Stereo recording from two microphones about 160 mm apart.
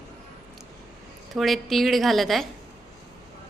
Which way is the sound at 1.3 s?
Centre (ahead or behind).